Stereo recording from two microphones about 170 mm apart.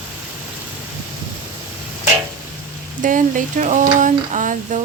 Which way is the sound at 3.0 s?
50° right (ahead or behind).